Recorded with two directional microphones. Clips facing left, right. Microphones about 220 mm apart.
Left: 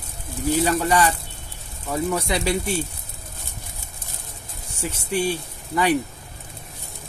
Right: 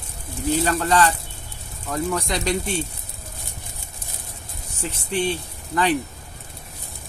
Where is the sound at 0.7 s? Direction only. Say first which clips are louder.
Even; 10° left (ahead or behind).